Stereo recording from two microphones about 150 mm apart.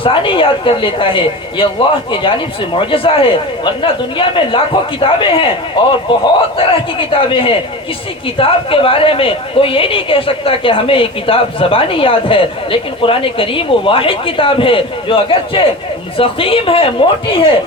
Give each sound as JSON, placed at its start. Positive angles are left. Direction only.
{"t": 0.0, "sound": "a woman's voice", "side_deg": 35}
{"t": 2.7, "sound": "a woman's voice", "side_deg": 35}